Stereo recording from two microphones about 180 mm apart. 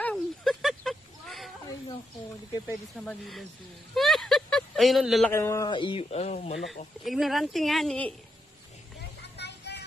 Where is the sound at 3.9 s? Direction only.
Centre (ahead or behind).